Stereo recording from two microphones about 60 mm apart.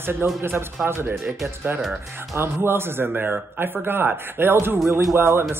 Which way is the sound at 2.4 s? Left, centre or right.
Right.